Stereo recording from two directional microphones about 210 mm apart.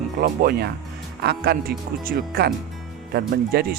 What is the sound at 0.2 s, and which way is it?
Speech, 50° right (ahead or behind).